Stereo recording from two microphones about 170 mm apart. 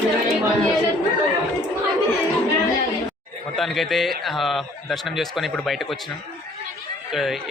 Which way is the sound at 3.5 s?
Centre (ahead or behind).